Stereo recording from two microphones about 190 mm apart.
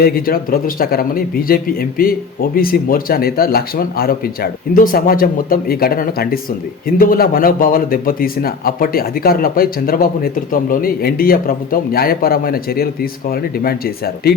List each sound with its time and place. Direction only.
0.0 s a man's voice: 50° left (ahead or behind)